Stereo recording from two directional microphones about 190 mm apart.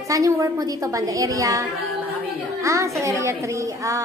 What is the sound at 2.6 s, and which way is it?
Speech, 15° right (ahead or behind).